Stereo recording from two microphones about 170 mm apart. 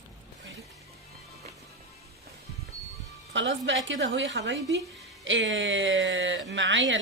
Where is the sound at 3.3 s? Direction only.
90° right.